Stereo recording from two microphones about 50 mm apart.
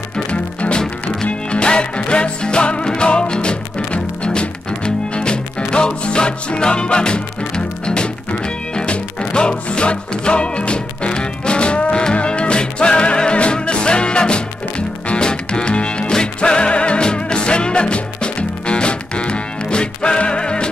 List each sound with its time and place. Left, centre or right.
0.3 s music: left